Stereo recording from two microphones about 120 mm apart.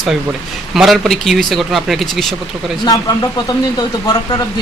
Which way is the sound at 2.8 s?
35° left (ahead or behind).